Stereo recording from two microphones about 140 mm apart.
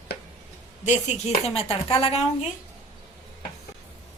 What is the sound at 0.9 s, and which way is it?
A woman's voice, 50° left (ahead or behind).